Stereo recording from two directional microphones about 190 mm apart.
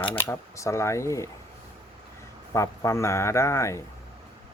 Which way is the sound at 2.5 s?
15° left (ahead or behind).